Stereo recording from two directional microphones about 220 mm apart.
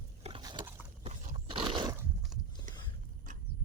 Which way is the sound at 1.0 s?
30° right (ahead or behind).